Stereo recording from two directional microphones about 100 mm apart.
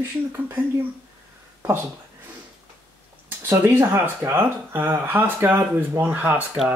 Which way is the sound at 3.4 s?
20° right (ahead or behind).